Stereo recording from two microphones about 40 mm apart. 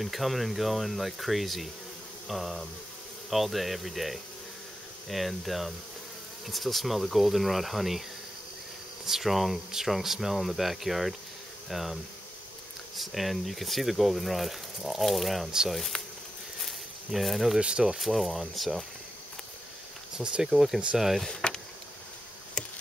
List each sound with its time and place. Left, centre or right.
0.0 s speech: centre
9.0 s speech: centre
15.9 s insect: left
16.5 s a sound: centre
17.6 s speech: right
17.9 s speech: centre
20.4 s speech: centre
21.3 s insect: centre